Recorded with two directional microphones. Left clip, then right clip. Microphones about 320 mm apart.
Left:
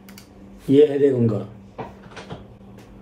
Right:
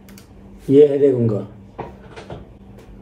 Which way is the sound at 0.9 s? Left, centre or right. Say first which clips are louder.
Right 3 dB; centre.